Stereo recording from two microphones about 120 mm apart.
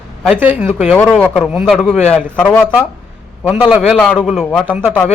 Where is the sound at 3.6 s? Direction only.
5° right (ahead or behind).